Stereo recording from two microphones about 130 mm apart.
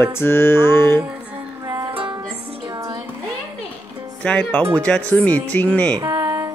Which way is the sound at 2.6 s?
30° right (ahead or behind).